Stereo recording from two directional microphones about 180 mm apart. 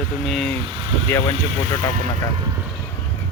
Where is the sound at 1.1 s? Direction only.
15° left (ahead or behind).